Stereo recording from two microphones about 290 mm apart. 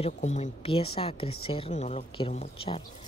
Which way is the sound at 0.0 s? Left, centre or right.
Left.